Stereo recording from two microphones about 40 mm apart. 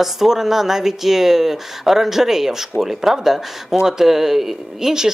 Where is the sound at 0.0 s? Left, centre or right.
Centre.